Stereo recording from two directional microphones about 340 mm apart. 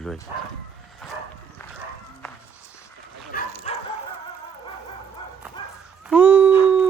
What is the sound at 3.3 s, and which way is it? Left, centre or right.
Bow-wow, left.